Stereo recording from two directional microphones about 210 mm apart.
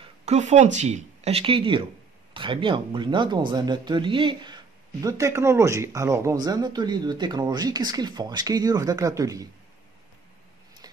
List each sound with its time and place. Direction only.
0.2 s speech: 35° right (ahead or behind); by 9.5 s 15° right (ahead or behind)